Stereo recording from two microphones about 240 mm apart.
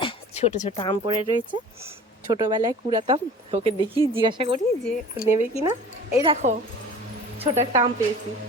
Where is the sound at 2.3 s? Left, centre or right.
Centre.